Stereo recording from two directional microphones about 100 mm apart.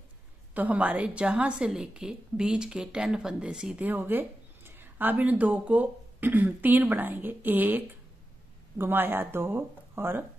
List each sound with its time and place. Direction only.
0.6 s a woman's voice: 15° right (ahead or behind)
3.8 s speech: 20° right (ahead or behind)